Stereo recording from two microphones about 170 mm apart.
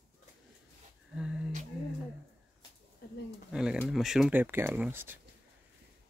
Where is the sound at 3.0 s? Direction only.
70° left (ahead or behind).